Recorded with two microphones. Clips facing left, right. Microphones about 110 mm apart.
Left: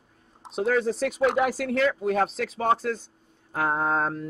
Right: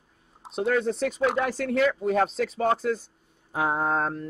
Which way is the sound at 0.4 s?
Centre (ahead or behind).